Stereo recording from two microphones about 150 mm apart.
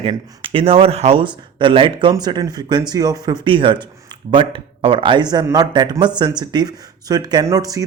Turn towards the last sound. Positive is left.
turn(degrees=-25)  # may be behind; listen again after turning